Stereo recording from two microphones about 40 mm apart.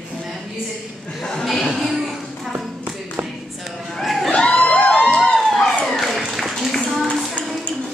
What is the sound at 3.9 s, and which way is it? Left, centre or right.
Screaming, centre.